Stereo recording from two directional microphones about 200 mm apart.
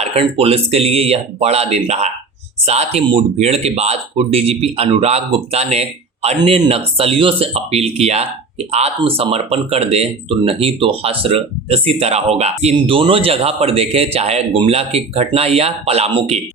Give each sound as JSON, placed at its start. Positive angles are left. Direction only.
{"t": 0.0, "sound": "speech", "side_deg": -30}